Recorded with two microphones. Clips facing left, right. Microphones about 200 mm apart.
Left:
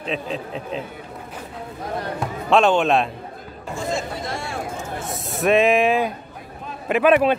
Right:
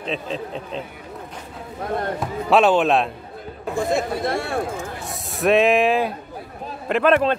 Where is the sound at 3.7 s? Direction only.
60° right (ahead or behind).